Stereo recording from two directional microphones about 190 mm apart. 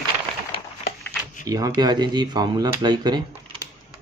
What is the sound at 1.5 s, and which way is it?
Speech, 20° right (ahead or behind).